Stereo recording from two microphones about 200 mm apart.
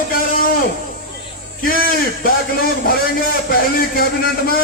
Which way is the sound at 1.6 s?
45° left (ahead or behind).